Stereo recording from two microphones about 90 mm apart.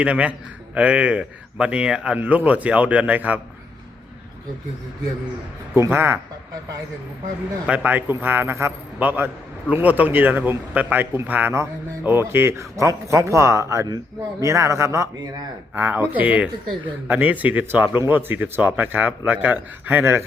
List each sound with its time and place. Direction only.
0.0 s a man's voice: 15° right (ahead or behind)
5.7 s a man's voice: 25° right (ahead or behind)
7.7 s a man's voice: 15° right (ahead or behind)